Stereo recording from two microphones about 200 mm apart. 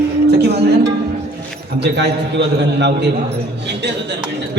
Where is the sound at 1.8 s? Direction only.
60° right (ahead or behind).